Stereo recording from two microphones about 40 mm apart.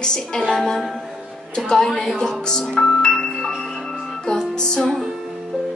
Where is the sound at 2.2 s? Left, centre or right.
Centre.